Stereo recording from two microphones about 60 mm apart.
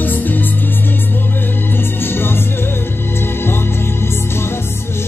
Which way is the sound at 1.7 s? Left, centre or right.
Left.